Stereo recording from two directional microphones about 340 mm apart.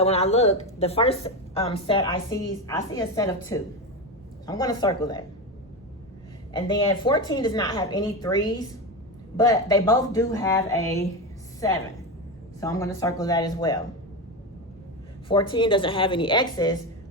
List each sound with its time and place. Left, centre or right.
0.0 s a woman's voice: centre
6.5 s a woman's voice: centre
12.5 s a woman's voice: centre
15.3 s a woman's voice: centre